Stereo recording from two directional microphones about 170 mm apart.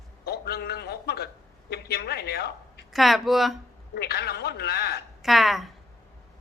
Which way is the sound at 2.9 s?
Centre (ahead or behind).